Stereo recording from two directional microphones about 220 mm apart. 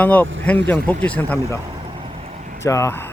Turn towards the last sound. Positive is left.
turn(degrees=10)  # may be behind; listen again after turning